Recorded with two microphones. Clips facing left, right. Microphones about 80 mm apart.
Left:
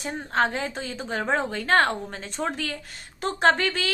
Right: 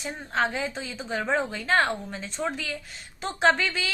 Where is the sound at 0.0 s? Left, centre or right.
Left.